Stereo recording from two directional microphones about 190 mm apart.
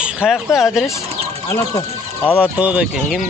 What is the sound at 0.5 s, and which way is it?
Speech, 15° left (ahead or behind).